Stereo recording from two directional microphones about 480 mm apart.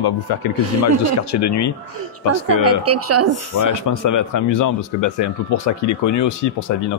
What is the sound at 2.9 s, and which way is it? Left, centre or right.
Speech, right.